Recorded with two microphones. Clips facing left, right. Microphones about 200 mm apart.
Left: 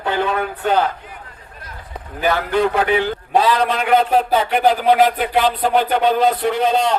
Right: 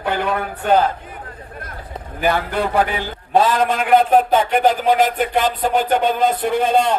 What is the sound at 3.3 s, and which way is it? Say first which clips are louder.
Speech: right 1 dB; 50° right (ahead or behind).